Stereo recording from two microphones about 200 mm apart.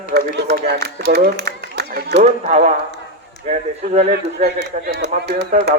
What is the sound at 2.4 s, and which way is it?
A man's voice, 35° right (ahead or behind).